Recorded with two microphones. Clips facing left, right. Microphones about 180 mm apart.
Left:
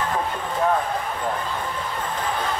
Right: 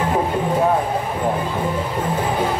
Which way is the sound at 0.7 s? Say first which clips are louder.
Right 4 dB; 25° right (ahead or behind).